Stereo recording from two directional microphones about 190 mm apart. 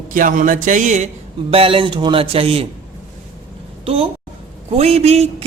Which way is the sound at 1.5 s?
30° right (ahead or behind).